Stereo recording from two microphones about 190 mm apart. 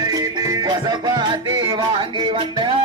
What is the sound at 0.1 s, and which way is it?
Music, 20° right (ahead or behind).